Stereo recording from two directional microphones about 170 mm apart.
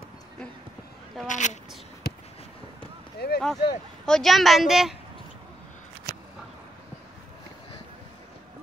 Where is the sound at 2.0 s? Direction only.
65° left (ahead or behind).